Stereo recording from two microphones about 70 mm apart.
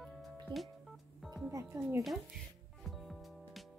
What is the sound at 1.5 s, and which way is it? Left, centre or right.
Music, right.